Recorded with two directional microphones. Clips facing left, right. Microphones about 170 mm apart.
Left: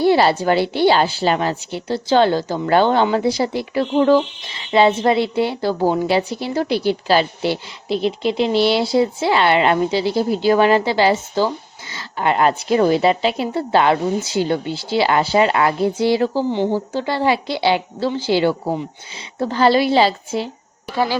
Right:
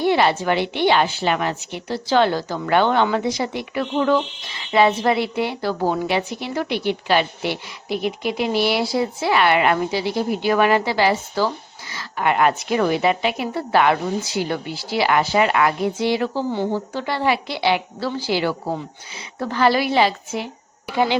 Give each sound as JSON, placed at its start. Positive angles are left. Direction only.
{"t": 0.0, "sound": "a woman's voice", "side_deg": 35}
{"t": 20.8, "sound": "speech", "side_deg": -15}